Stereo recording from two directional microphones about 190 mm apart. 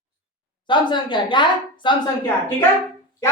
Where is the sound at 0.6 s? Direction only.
25° left (ahead or behind).